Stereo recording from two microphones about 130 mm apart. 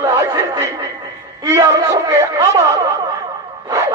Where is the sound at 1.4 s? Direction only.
25° right (ahead or behind).